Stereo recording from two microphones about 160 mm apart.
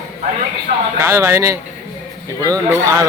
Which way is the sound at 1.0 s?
15° right (ahead or behind).